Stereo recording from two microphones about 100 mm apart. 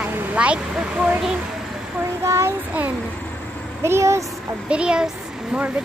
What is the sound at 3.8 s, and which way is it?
Speech, 25° right (ahead or behind).